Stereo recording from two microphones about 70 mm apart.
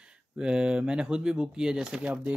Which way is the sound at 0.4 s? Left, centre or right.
Centre.